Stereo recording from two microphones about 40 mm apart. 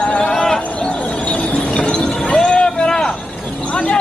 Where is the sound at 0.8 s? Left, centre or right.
Left.